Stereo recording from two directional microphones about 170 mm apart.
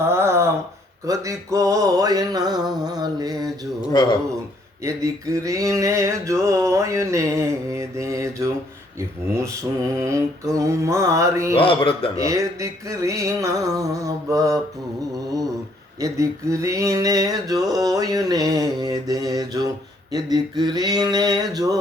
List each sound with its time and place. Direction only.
0.0 s a sound: 15° right (ahead or behind)
1.0 s male singing: 20° right (ahead or behind)
3.8 s a man's voice: 25° left (ahead or behind)
4.8 s male singing: 20° right (ahead or behind)
9.0 s mantra: 15° right (ahead or behind)
11.5 s a man's voice: 30° left (ahead or behind)
12.1 s male singing: 20° right (ahead or behind)
16.0 s male singing: 20° right (ahead or behind)